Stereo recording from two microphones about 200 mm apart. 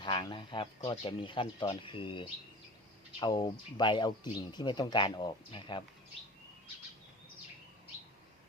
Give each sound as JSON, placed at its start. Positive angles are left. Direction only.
{"t": 0.0, "sound": "speech", "side_deg": 25}